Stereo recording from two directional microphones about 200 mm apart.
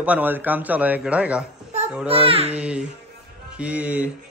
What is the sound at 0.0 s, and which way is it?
Speech, 10° right (ahead or behind).